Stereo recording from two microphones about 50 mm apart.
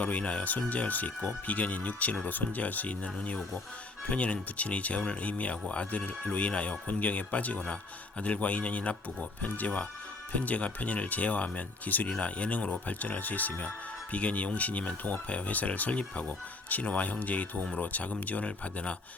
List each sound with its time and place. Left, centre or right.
0.0 s speech: left